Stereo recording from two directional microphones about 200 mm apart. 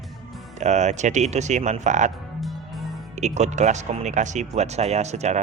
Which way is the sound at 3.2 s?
35° right (ahead or behind).